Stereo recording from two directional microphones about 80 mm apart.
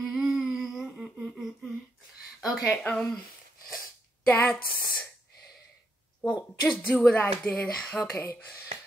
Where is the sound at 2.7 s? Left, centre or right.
Centre.